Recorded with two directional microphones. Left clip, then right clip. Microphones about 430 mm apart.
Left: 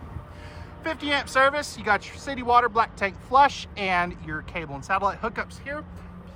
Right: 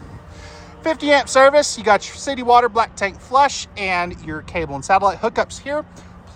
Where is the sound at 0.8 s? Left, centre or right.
Centre.